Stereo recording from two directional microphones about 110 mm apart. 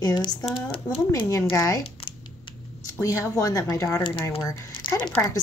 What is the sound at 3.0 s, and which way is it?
A woman's voice, 30° left (ahead or behind).